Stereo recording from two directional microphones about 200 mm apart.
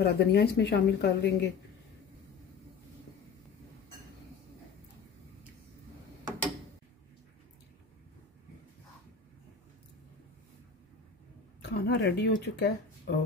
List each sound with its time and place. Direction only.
0.0 s speech: 55° left (ahead or behind)
11.7 s speech: 55° left (ahead or behind)